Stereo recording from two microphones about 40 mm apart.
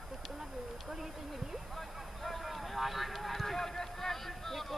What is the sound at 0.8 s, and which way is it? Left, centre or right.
Speech, centre.